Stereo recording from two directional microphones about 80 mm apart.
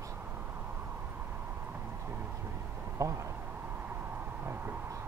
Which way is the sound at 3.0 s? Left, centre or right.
Right.